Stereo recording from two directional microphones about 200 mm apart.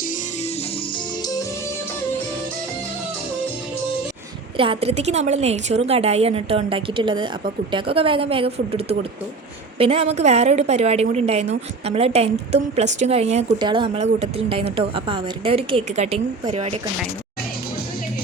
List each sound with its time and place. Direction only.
4.5 s a woman's voice: 25° right (ahead or behind)